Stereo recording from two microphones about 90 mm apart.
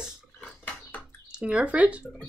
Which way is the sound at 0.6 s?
15° left (ahead or behind).